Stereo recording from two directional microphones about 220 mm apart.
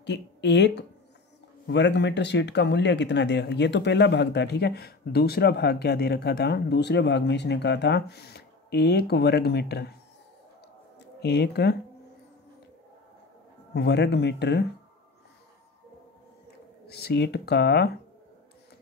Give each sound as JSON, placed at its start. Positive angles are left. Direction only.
{"t": 0.0, "sound": "speech", "side_deg": 50}
{"t": 11.0, "sound": "speech", "side_deg": 50}
{"t": 13.7, "sound": "speech", "side_deg": 50}
{"t": 16.8, "sound": "speech", "side_deg": 45}